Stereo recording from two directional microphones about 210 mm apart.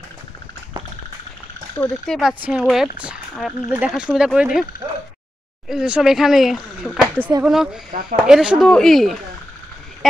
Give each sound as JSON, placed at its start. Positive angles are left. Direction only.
{"t": 2.0, "sound": "speech", "side_deg": 0}
{"t": 5.7, "sound": "speech", "side_deg": -5}
{"t": 7.9, "sound": "speech", "side_deg": -40}
{"t": 8.3, "sound": "speech", "side_deg": -5}